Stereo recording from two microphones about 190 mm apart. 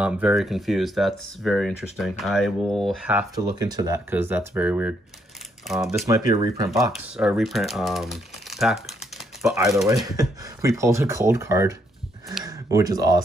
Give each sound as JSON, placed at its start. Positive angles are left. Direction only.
{"t": 0.0, "sound": "speech", "side_deg": -5}
{"t": 3.3, "sound": "speech", "side_deg": -20}
{"t": 6.0, "sound": "speech", "side_deg": -20}
{"t": 6.7, "sound": "speech", "side_deg": 0}
{"t": 10.0, "sound": "speech", "side_deg": -20}